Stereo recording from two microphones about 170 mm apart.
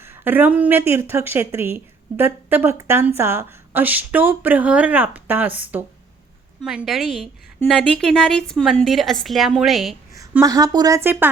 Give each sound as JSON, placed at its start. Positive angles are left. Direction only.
{"t": 0.0, "sound": "a woman's voice", "side_deg": -10}
{"t": 10.4, "sound": "speech", "side_deg": -20}